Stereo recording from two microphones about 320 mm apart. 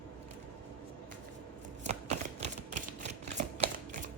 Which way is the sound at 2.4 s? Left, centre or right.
Right.